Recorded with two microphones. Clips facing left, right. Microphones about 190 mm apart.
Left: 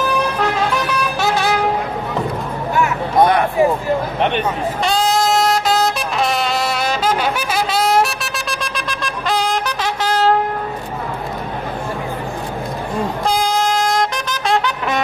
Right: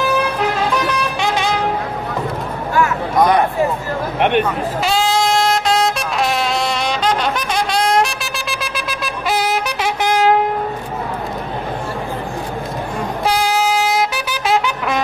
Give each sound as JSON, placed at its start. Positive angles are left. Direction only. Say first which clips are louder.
{"t": 0.8, "sound": "vehicle", "louder": "even", "side_deg": 5}
{"t": 2.7, "sound": "a sound", "louder": "even", "side_deg": 25}
{"t": 4.4, "sound": "music", "louder": "right 2 dB", "side_deg": 0}
{"t": 10.1, "sound": "train", "louder": "right 1 dB", "side_deg": -15}
{"t": 13.3, "sound": "trumpet", "louder": "right 2 dB", "side_deg": -5}